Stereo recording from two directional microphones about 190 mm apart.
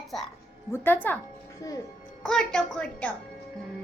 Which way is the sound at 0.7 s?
10° left (ahead or behind).